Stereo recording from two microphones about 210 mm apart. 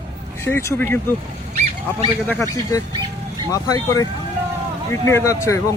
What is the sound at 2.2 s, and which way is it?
Speech, 15° left (ahead or behind).